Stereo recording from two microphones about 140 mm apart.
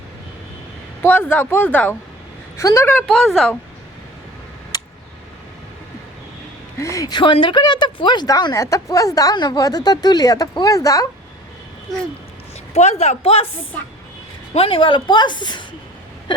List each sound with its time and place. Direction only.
1.0 s speech: 10° left (ahead or behind)
3.1 s a woman's voice: centre (ahead or behind)
6.7 s a woman's voice: 20° left (ahead or behind)
12.7 s speech: 50° left (ahead or behind)
14.5 s speech: 40° left (ahead or behind)